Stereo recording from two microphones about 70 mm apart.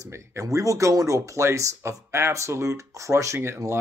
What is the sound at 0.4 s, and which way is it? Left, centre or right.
Speech, right.